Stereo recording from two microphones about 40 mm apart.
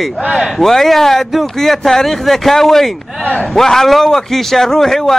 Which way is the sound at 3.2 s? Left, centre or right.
Left.